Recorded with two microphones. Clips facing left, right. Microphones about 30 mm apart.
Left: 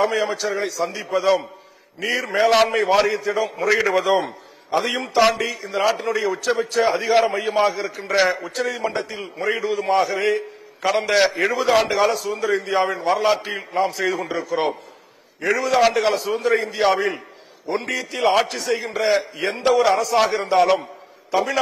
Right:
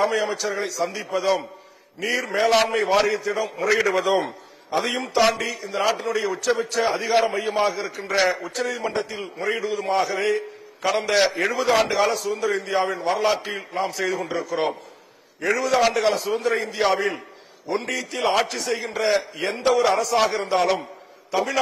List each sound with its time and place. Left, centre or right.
0.0 s a man's voice: centre